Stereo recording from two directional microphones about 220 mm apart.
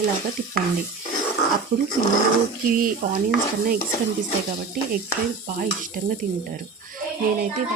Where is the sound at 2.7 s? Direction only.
40° right (ahead or behind).